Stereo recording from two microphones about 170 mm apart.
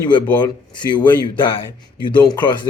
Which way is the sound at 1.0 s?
30° left (ahead or behind).